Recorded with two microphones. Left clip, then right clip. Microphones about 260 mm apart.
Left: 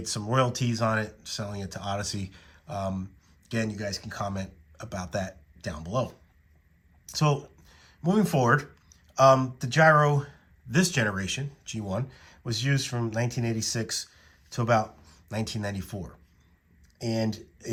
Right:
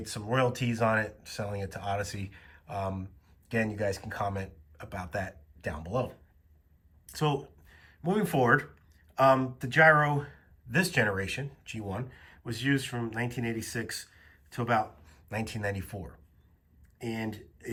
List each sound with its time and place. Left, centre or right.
0.0 s speech: centre
7.0 s a sound: left
7.8 s speech: centre